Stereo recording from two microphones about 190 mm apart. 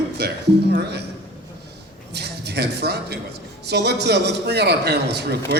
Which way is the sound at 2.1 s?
60° right (ahead or behind).